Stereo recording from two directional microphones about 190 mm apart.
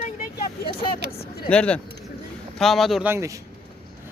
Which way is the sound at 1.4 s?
5° left (ahead or behind).